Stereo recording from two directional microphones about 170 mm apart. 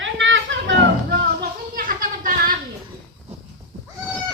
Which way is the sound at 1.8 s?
50° right (ahead or behind).